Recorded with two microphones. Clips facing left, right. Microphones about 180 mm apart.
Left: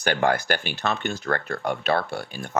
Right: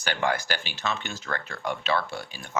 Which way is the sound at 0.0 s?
50° left (ahead or behind).